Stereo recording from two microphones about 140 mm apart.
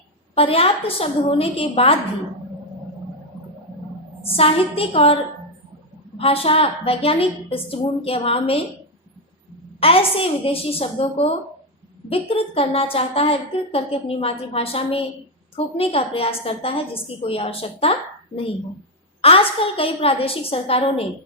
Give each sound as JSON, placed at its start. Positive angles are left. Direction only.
{"t": 0.3, "sound": "a woman's voice", "side_deg": 45}
{"t": 4.2, "sound": "a woman's voice", "side_deg": 45}
{"t": 9.8, "sound": "a woman's voice", "side_deg": 40}
{"t": 19.2, "sound": "a woman's voice", "side_deg": 45}